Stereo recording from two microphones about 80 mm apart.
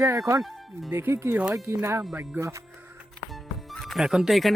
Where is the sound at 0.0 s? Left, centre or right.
Right.